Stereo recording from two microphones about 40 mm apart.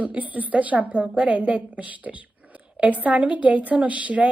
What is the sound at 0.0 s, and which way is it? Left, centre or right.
A woman's voice, right.